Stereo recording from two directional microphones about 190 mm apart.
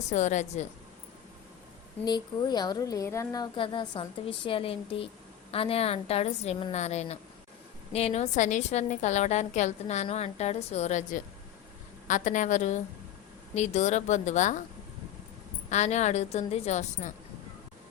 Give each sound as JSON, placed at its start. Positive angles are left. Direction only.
{"t": 0.1, "sound": "a woman's voice", "side_deg": 40}
{"t": 2.0, "sound": "a woman's voice", "side_deg": 20}
{"t": 15.7, "sound": "a woman's voice", "side_deg": 35}